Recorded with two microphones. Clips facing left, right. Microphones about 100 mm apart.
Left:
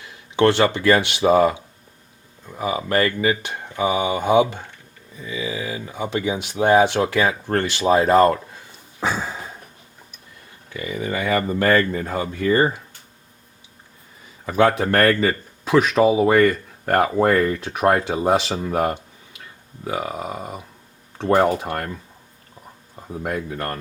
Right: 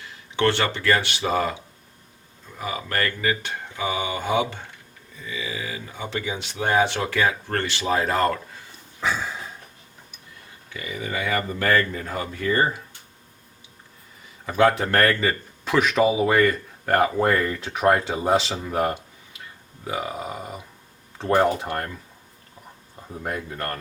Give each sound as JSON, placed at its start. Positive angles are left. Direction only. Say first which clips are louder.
{"t": 0.0, "sound": "speech", "louder": "left 5 dB", "side_deg": 15}
{"t": 2.6, "sound": "speech", "louder": "left 6 dB", "side_deg": 20}
{"t": 9.0, "sound": "a sound", "louder": "left 2 dB", "side_deg": 35}
{"t": 10.8, "sound": "speech", "louder": "left 4 dB", "side_deg": 30}
{"t": 14.4, "sound": "speech", "louder": "left 2 dB", "side_deg": 20}
{"t": 15.6, "sound": "speech", "louder": "left 4 dB", "side_deg": 20}
{"t": 16.0, "sound": "speech", "louder": "left 3 dB", "side_deg": 30}
{"t": 16.3, "sound": "speech", "louder": "left 4 dB", "side_deg": 15}
{"t": 17.0, "sound": "speech", "louder": "left 5 dB", "side_deg": 25}
{"t": 23.0, "sound": "speech", "louder": "left 4 dB", "side_deg": 15}